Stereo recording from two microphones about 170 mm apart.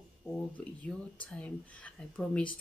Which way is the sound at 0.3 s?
5° left (ahead or behind).